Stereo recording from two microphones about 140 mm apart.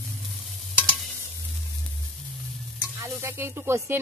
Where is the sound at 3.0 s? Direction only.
20° right (ahead or behind).